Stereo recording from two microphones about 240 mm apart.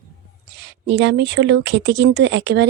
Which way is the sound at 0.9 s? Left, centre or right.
Right.